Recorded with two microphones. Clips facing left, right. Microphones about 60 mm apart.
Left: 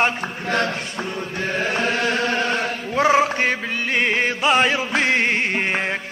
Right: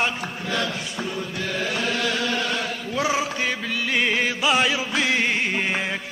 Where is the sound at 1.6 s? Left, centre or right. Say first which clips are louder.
Left 4 dB; left.